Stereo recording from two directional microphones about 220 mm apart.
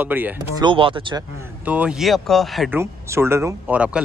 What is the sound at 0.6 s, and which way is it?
Speech, 25° right (ahead or behind).